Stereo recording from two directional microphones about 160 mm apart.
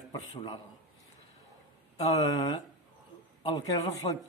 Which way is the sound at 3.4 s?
30° left (ahead or behind).